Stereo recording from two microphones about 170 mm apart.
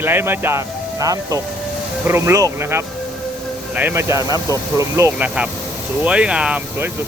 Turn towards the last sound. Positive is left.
turn(degrees=-5)  # may be behind; listen again after turning